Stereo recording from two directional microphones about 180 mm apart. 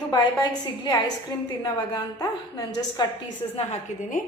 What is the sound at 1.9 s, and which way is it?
Speech, 20° left (ahead or behind).